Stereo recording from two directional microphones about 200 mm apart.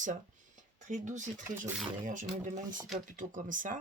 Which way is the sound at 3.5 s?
40° right (ahead or behind).